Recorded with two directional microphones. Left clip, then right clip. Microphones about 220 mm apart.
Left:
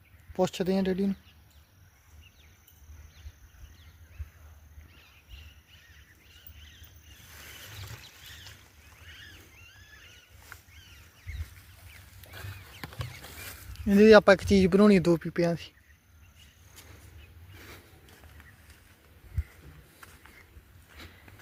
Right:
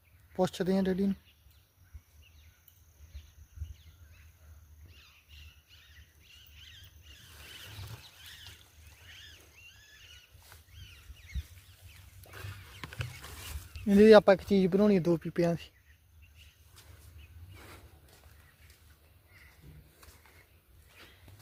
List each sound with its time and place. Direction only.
0.3 s speech: 5° left (ahead or behind)
9.1 s a sound: 40° right (ahead or behind)
13.8 s speech: centre (ahead or behind); by 15.2 s 15° left (ahead or behind)
15.2 s speech: centre (ahead or behind)